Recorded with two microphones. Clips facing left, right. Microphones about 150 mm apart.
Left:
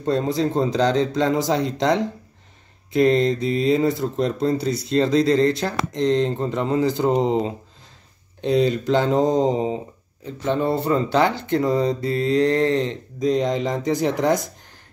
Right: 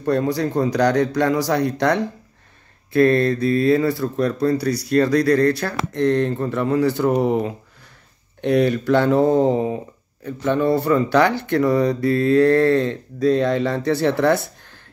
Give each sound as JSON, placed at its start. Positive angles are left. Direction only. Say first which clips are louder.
{"t": 0.0, "sound": "speech", "louder": "right 1 dB", "side_deg": 20}
{"t": 8.4, "sound": "speech", "louder": "right 2 dB", "side_deg": -65}
{"t": 8.6, "sound": "speech", "louder": "right 2 dB", "side_deg": 20}